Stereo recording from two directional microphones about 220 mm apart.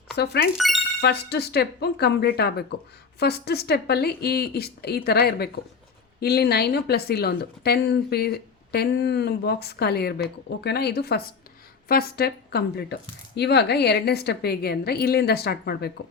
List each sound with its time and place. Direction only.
0.5 s speech: centre (ahead or behind)
1.0 s speech: 50° left (ahead or behind)